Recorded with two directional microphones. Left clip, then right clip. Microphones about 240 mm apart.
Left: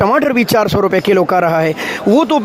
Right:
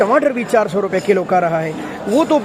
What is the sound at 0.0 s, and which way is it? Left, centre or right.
Speech, left.